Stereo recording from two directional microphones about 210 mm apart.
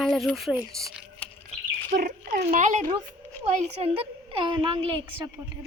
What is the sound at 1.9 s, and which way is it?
A woman's voice, 45° right (ahead or behind).